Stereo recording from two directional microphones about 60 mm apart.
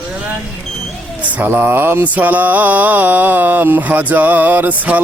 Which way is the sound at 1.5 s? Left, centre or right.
Right.